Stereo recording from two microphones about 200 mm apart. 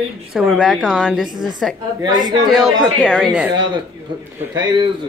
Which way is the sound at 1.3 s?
20° right (ahead or behind).